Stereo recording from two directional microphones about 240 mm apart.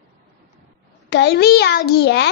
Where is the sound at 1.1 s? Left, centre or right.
Left.